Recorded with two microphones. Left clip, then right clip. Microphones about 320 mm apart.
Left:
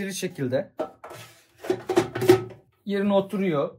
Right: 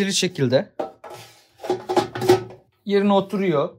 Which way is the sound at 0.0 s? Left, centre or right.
Right.